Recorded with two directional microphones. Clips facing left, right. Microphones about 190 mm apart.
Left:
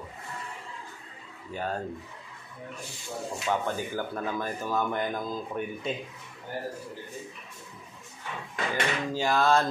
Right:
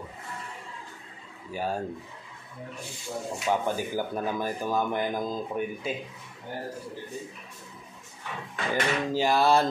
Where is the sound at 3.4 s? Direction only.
15° right (ahead or behind).